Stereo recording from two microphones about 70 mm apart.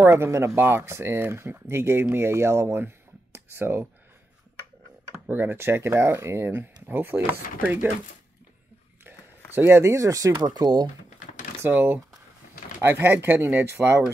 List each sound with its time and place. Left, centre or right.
0.0 s speech: right
5.1 s speech: right
9.6 s speech: right
10.3 s speech: right
11.6 s speech: right